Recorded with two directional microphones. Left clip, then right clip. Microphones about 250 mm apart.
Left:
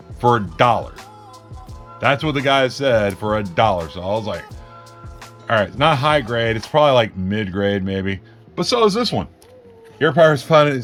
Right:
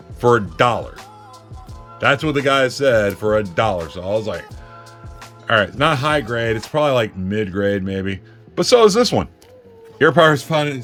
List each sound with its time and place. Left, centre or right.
0.2 s speech: centre
8.6 s speech: centre